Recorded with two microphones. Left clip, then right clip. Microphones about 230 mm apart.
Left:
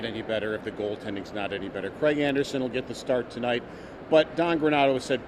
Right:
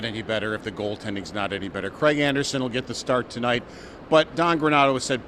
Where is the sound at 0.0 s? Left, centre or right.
Right.